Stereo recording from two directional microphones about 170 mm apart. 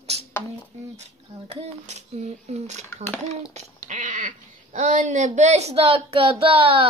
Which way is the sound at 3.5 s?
45° right (ahead or behind).